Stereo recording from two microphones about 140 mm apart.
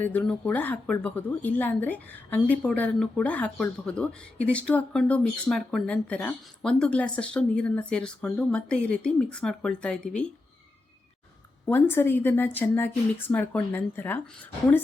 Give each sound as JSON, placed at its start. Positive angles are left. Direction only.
{"t": 0.0, "sound": "speech", "side_deg": 10}
{"t": 11.6, "sound": "speech", "side_deg": 15}